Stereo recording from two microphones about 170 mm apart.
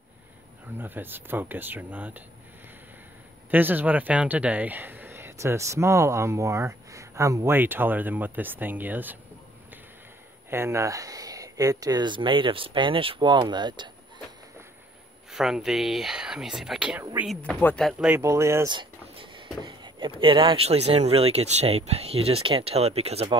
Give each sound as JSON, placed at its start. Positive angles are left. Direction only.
{"t": 0.7, "sound": "speech", "side_deg": -10}
{"t": 3.4, "sound": "speech", "side_deg": -10}
{"t": 10.5, "sound": "speech", "side_deg": -15}
{"t": 15.3, "sound": "speech", "side_deg": 0}
{"t": 17.0, "sound": "speech", "side_deg": -15}
{"t": 17.4, "sound": "speech", "side_deg": 10}
{"t": 17.8, "sound": "speech", "side_deg": -5}
{"t": 18.2, "sound": "speech", "side_deg": -15}
{"t": 18.7, "sound": "a sound", "side_deg": -30}
{"t": 19.6, "sound": "speech", "side_deg": -30}